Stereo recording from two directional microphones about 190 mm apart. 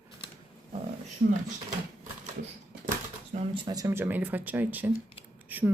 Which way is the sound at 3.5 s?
25° right (ahead or behind).